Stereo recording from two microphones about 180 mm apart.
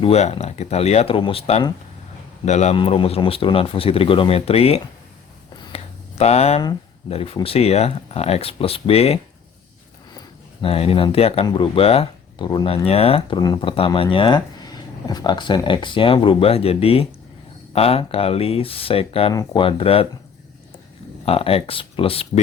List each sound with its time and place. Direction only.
0.0 s speech: 35° left (ahead or behind)
5.5 s a sound: 35° left (ahead or behind)
7.1 s speech: 30° left (ahead or behind)
10.2 s speech: 30° left (ahead or behind)
21.2 s speech: 30° left (ahead or behind)